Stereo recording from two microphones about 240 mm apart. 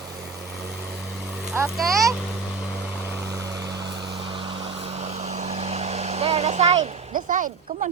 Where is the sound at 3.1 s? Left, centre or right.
Centre.